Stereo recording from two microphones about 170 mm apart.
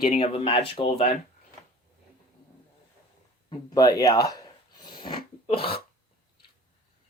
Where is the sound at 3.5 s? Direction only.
25° left (ahead or behind).